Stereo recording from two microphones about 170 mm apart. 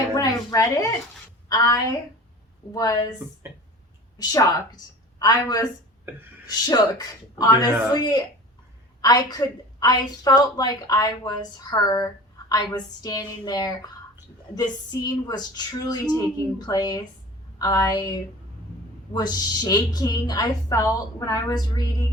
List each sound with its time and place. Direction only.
0.1 s a sound: 20° left (ahead or behind)
1.5 s a woman's voice: 20° left (ahead or behind)
4.2 s a woman's voice: 25° left (ahead or behind)